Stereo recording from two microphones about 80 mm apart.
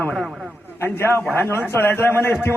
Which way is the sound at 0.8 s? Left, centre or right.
Left.